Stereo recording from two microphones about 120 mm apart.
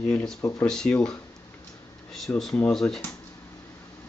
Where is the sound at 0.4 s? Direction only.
20° left (ahead or behind).